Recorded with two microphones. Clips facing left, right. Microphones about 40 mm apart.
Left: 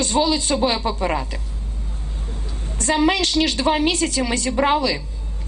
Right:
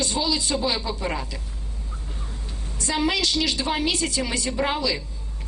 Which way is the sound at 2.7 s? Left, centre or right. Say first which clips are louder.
Left 6 dB; left.